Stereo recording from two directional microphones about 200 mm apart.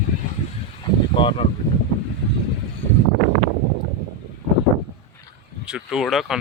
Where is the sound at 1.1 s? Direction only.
25° left (ahead or behind).